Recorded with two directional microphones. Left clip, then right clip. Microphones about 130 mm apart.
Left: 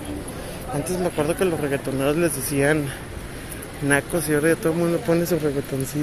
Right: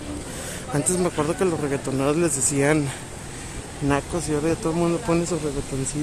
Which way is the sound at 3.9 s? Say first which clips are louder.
Left 3 dB; 10° right (ahead or behind).